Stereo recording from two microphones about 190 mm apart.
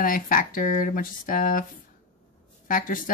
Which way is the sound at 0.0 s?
45° left (ahead or behind).